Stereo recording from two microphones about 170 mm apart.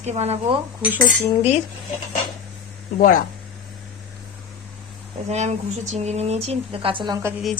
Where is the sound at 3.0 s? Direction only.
55° left (ahead or behind).